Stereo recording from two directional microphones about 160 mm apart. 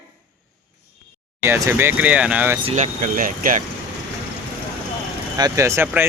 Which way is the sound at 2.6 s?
45° right (ahead or behind).